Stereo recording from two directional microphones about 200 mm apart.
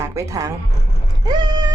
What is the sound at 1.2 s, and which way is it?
Vehicle, 20° right (ahead or behind).